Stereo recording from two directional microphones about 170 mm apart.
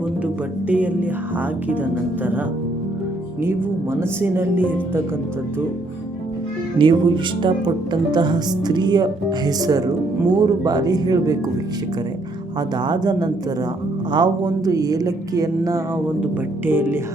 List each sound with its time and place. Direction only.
0.7 s speech: 10° right (ahead or behind)
4.2 s speech: 10° right (ahead or behind)
6.7 s speech: 30° right (ahead or behind)
12.7 s speech: 25° right (ahead or behind)